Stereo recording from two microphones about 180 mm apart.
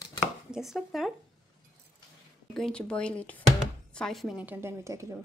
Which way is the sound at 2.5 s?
5° left (ahead or behind).